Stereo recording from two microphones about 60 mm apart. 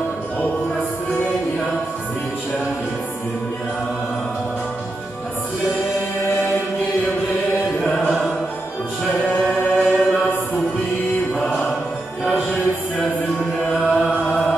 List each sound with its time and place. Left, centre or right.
7.8 s music: centre
11.3 s music: centre
12.3 s music: centre
13.8 s chant: centre